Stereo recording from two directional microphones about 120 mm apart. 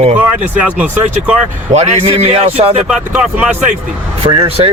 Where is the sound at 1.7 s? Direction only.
70° right (ahead or behind).